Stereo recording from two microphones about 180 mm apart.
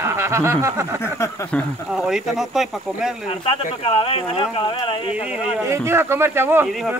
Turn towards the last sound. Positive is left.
turn(degrees=0)  # may be behind; listen again after turning